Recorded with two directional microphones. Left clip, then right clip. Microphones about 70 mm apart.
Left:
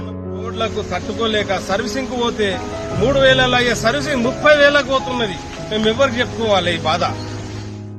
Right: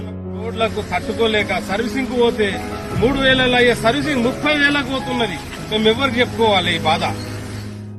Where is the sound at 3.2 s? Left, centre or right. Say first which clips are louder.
Left 1 dB; left.